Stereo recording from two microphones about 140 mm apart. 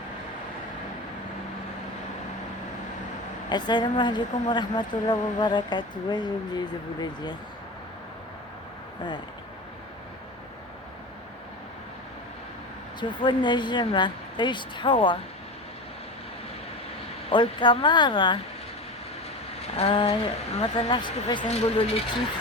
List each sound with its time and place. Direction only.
3.5 s a woman's voice: 30° left (ahead or behind)
13.0 s a woman's voice: 35° left (ahead or behind)
17.2 s a woman's voice: 35° left (ahead or behind)
19.7 s a woman's voice: 40° left (ahead or behind)
21.4 s speech: 45° left (ahead or behind)